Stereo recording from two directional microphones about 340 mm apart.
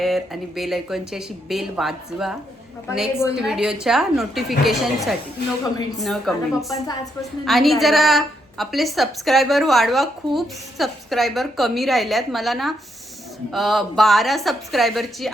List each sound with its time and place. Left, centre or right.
0.0 s a woman's voice: centre